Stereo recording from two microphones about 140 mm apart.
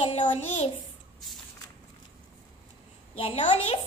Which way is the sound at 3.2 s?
40° left (ahead or behind).